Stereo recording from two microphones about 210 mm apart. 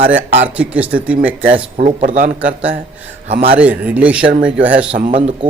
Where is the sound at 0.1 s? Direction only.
65° right (ahead or behind).